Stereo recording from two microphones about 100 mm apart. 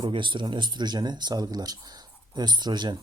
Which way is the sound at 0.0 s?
55° right (ahead or behind).